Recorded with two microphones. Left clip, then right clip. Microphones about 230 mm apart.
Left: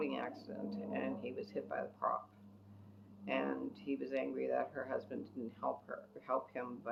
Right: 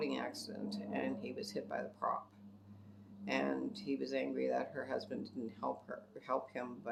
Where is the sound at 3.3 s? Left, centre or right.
Right.